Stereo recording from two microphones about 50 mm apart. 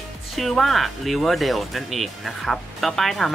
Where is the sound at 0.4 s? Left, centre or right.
Centre.